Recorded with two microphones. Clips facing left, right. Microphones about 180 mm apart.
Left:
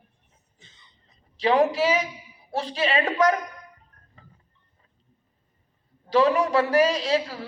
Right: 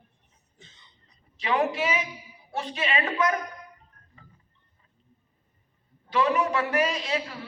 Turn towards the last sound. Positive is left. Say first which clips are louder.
# left 6 dB
turn(degrees=35)  # may be behind; listen again after turning